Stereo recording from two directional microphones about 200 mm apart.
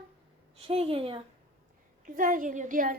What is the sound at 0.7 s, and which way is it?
Speech, 30° right (ahead or behind).